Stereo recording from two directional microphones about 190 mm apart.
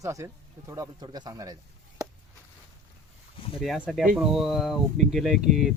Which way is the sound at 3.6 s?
Centre (ahead or behind).